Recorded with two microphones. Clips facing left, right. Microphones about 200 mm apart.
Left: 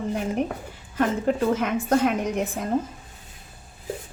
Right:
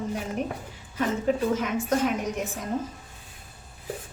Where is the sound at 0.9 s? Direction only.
60° left (ahead or behind).